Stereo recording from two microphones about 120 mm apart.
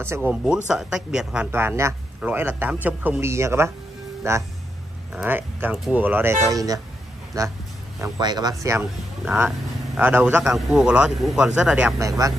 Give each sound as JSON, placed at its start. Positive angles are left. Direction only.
{"t": 0.3, "sound": "a man's voice", "side_deg": -10}
{"t": 1.5, "sound": "a man's voice", "side_deg": -20}
{"t": 6.5, "sound": "a man's voice", "side_deg": -30}
{"t": 9.2, "sound": "a man's voice", "side_deg": -5}
{"t": 10.4, "sound": "speech", "side_deg": -5}
{"t": 12.0, "sound": "a man's voice", "side_deg": -30}